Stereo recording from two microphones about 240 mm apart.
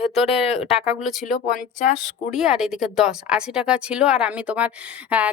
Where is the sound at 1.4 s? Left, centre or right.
Left.